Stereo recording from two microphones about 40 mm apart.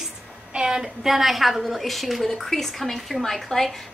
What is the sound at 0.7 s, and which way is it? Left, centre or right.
A woman's voice, centre.